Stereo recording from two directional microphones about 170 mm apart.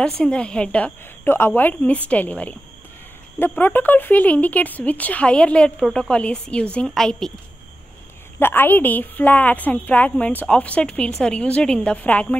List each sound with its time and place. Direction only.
0.0 s speech: 5° left (ahead or behind)
8.4 s speech: 10° left (ahead or behind)